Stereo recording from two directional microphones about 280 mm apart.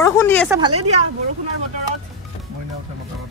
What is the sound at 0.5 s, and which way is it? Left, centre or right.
Speech, centre.